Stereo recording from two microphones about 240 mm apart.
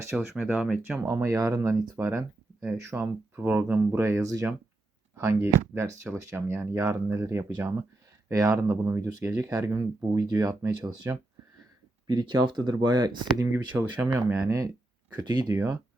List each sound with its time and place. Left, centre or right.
0.2 s speech: centre
15.1 s speech: centre